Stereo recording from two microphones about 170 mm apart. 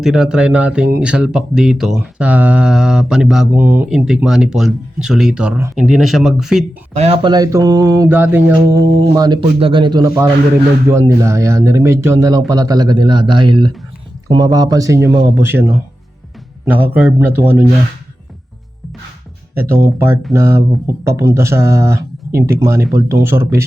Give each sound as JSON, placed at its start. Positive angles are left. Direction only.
{"t": 0.0, "sound": "speech", "side_deg": 0}
{"t": 6.9, "sound": "speech", "side_deg": -35}
{"t": 19.5, "sound": "speech", "side_deg": -15}